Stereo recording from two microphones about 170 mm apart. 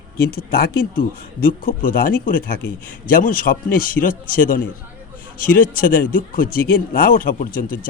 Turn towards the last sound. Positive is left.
turn(degrees=55)  # may be behind; listen again after turning